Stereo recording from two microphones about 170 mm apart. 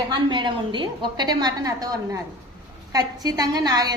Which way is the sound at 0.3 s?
25° right (ahead or behind).